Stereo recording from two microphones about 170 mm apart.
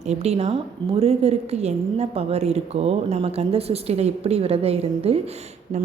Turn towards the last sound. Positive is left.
turn(degrees=-35)  # may be behind; listen again after turning